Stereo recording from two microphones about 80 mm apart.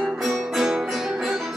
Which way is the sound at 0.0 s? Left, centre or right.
Centre.